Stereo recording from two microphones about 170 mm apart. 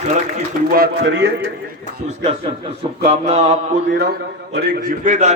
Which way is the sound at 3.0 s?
40° right (ahead or behind).